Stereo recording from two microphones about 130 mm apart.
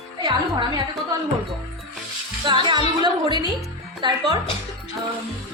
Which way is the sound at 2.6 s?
35° right (ahead or behind).